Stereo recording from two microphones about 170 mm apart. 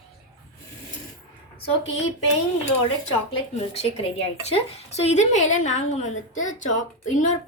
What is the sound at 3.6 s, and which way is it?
A woman's voice, 35° left (ahead or behind).